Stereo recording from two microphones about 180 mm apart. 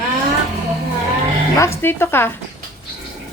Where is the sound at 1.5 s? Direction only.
15° left (ahead or behind).